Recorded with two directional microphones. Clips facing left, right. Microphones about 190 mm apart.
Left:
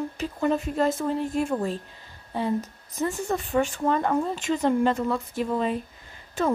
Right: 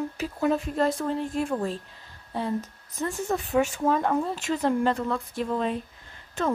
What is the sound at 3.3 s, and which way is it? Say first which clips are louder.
Speech: right 3 dB; centre (ahead or behind).